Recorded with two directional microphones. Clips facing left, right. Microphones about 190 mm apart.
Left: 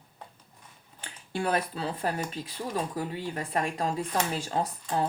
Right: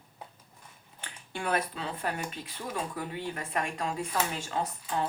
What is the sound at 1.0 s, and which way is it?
Speech, 35° left (ahead or behind).